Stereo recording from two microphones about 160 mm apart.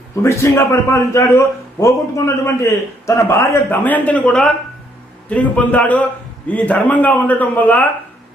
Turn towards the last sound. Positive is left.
turn(degrees=10)  # may be behind; listen again after turning